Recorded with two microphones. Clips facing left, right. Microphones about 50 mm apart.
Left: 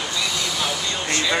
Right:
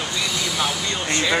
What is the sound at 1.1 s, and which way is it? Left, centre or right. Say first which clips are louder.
Speech: right 1 dB; centre.